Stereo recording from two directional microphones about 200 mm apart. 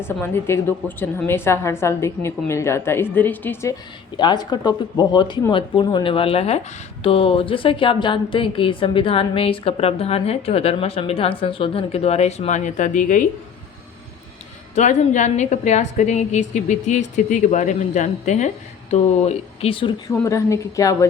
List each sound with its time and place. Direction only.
0.0 s a woman's voice: 10° left (ahead or behind); by 13.2 s 40° left (ahead or behind)
14.8 s a woman's voice: 35° left (ahead or behind)
20.1 s a woman's voice: 15° left (ahead or behind)